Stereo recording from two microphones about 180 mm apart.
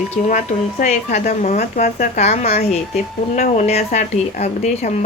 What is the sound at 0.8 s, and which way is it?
A woman's voice, 40° left (ahead or behind).